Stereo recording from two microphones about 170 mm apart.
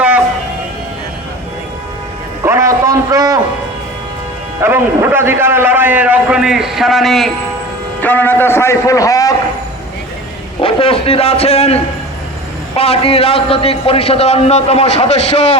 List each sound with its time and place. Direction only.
2.4 s music: 15° right (ahead or behind)
4.6 s a man's voice: 15° right (ahead or behind); by 9.3 s 20° left (ahead or behind)
10.6 s a man's voice: 35° left (ahead or behind)